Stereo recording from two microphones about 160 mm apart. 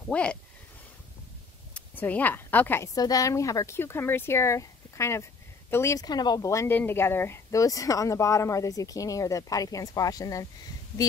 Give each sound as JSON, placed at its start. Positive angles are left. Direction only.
{"t": 0.1, "sound": "speech", "side_deg": 5}
{"t": 1.7, "sound": "a woman's voice", "side_deg": 10}